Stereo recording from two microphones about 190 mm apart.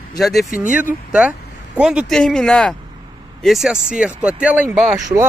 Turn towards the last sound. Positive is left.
turn(degrees=-5)  # may be behind; listen again after turning